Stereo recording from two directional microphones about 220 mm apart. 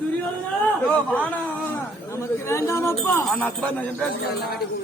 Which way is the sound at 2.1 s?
10° left (ahead or behind).